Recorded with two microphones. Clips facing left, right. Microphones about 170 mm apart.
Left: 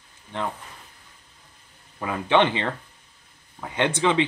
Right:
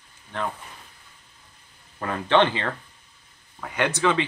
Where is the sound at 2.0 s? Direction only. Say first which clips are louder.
Even; 10° left (ahead or behind).